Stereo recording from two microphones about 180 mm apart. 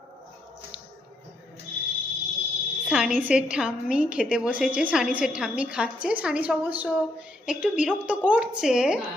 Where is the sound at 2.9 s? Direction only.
5° right (ahead or behind).